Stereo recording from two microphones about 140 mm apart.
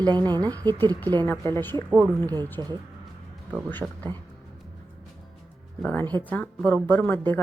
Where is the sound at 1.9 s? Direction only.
15° right (ahead or behind).